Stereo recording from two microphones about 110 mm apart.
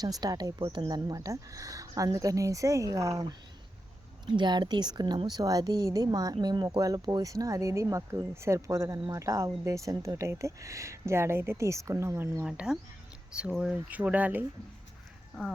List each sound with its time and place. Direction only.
0.0 s speech: 35° right (ahead or behind)
0.6 s speech: 55° right (ahead or behind)
0.9 s speech: 35° right (ahead or behind)
4.3 s speech: 45° right (ahead or behind); by 12.5 s 20° right (ahead or behind)
12.5 s speech: 5° right (ahead or behind)